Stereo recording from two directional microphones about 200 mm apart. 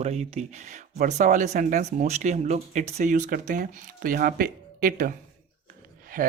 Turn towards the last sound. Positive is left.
turn(degrees=-45)  # may be behind; listen again after turning